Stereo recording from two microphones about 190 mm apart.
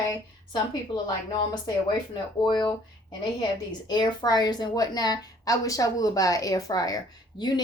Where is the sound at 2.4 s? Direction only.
25° left (ahead or behind).